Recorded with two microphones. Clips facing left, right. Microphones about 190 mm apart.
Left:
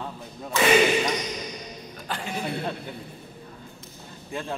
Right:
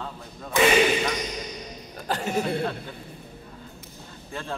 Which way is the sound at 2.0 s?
40° right (ahead or behind).